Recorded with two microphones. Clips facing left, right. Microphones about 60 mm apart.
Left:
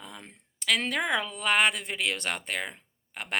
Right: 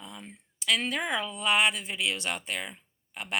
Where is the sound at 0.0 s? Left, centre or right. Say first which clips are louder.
Even; left.